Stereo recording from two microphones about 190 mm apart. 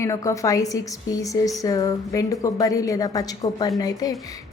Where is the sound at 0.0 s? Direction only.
15° left (ahead or behind).